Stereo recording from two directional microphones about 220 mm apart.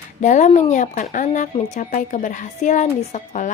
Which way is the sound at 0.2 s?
35° left (ahead or behind).